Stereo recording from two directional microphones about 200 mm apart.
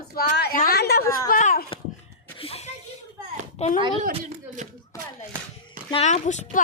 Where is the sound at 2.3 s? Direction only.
30° left (ahead or behind).